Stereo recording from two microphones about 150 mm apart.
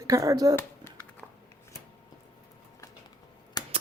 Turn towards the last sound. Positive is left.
turn(degrees=25)  # may be behind; listen again after turning